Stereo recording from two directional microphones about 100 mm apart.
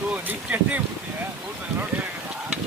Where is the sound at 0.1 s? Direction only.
15° right (ahead or behind).